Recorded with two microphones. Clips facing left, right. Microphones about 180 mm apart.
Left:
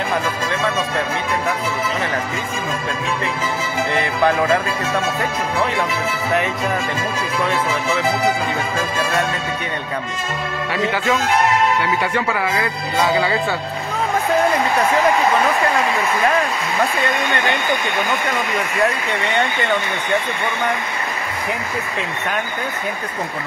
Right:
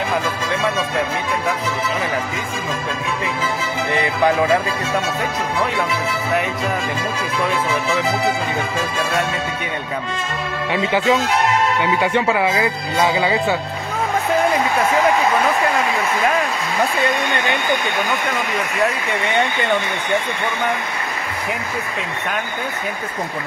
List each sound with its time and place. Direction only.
3.9 s music: 15° right (ahead or behind)
10.7 s speech: 20° right (ahead or behind)
13.2 s music: 15° right (ahead or behind)